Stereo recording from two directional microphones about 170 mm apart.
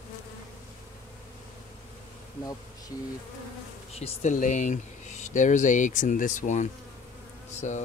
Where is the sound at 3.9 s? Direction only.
40° left (ahead or behind).